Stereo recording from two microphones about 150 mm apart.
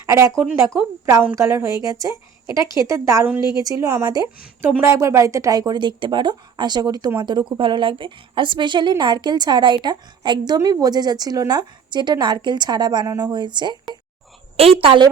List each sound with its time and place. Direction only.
0.0 s a woman's voice: 20° right (ahead or behind)
14.8 s a woman's voice: 35° right (ahead or behind)